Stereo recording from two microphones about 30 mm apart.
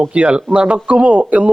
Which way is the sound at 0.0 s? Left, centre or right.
Right.